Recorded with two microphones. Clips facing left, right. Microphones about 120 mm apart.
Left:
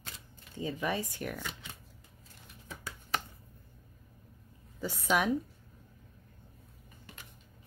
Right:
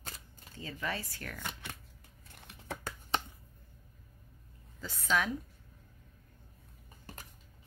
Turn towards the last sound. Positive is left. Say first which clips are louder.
# right 3 dB
turn(degrees=-40)  # may be behind; listen again after turning